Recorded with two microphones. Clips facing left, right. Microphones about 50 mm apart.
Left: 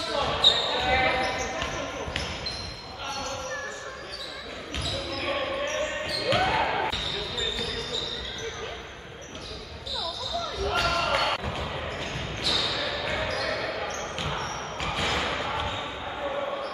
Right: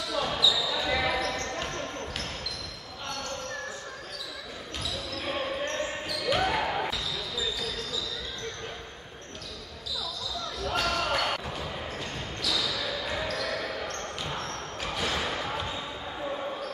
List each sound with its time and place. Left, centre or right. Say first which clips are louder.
0.1 s basketball bounce: left 2 dB; centre
5.1 s basketball bounce: left 3 dB; left
10.7 s basketball bounce: left 2 dB; centre